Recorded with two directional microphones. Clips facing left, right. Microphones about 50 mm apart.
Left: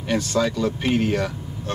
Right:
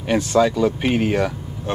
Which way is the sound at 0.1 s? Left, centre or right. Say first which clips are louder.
Right 5 dB; centre.